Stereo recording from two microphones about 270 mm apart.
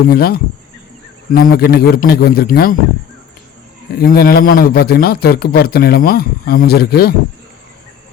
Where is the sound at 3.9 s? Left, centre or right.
Left.